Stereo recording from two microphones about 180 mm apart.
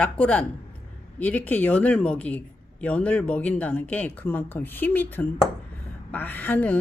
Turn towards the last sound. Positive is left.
turn(degrees=10)  # may be behind; listen again after turning